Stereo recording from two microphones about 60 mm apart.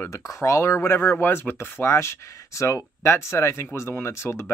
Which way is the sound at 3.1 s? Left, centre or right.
Left.